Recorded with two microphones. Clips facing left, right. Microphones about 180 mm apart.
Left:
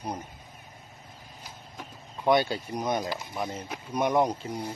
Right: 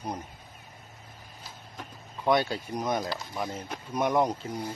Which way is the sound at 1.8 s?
Centre (ahead or behind).